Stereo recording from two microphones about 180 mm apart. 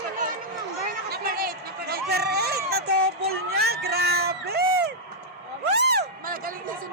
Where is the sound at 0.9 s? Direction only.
55° right (ahead or behind).